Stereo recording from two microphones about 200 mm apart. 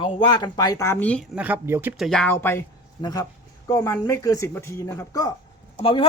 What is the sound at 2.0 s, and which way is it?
Speech, 5° left (ahead or behind).